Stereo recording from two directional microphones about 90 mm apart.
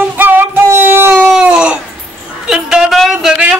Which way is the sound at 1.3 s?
10° right (ahead or behind).